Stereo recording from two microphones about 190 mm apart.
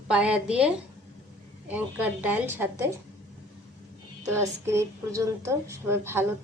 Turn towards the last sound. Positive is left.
turn(degrees=-10)  # may be behind; listen again after turning